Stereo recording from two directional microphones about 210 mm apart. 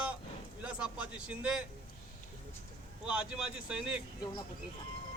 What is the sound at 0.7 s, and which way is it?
Speech, 5° right (ahead or behind).